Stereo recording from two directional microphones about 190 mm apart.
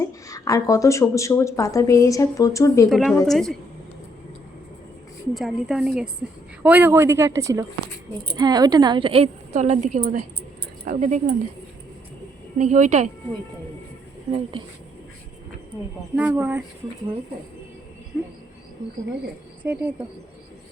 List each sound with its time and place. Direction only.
0.0 s a woman's voice: 15° left (ahead or behind)
2.9 s a woman's voice: centre (ahead or behind)
5.3 s a woman's voice: centre (ahead or behind); by 11.3 s 40° right (ahead or behind)
12.5 s a woman's voice: 40° right (ahead or behind)
16.1 s a woman's voice: 10° right (ahead or behind)
19.6 s a woman's voice: 10° right (ahead or behind)